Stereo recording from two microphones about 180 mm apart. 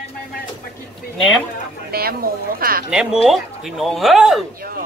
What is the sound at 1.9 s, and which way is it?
Speech, 55° right (ahead or behind).